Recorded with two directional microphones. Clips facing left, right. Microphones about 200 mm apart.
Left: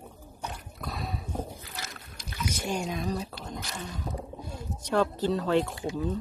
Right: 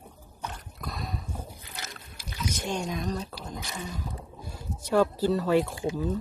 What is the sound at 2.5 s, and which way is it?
Speech, 10° left (ahead or behind).